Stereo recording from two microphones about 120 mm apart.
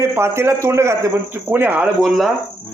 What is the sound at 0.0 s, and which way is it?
A man's voice, 20° right (ahead or behind).